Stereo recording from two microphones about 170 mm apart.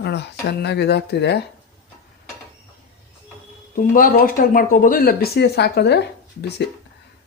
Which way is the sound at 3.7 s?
55° left (ahead or behind).